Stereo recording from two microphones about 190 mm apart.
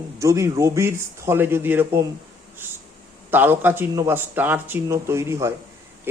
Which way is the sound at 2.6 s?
10° right (ahead or behind).